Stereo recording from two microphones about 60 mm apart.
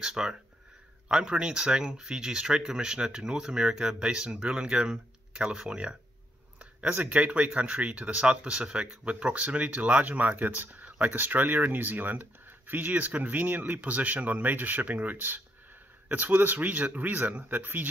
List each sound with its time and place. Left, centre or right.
0.0 s speech: centre; by 17.8 s right